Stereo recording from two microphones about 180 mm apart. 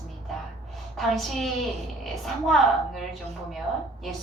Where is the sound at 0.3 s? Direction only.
Centre (ahead or behind).